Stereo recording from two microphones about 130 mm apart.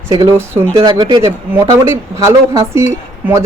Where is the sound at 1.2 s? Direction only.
20° right (ahead or behind).